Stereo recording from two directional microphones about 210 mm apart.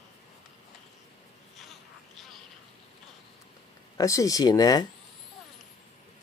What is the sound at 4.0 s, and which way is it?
Speech, 15° left (ahead or behind).